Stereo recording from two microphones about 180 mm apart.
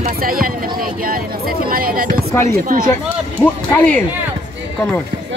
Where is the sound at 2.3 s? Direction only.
15° left (ahead or behind).